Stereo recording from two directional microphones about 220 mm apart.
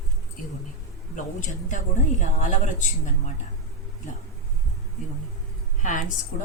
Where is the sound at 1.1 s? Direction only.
35° left (ahead or behind).